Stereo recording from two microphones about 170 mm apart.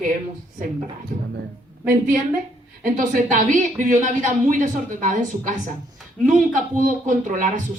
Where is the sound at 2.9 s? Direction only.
50° right (ahead or behind).